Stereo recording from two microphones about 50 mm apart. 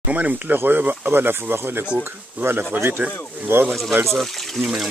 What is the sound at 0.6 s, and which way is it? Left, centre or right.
Speech, right.